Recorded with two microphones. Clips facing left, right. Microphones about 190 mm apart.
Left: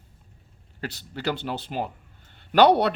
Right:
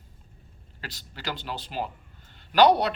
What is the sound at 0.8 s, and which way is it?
Speech, 50° left (ahead or behind).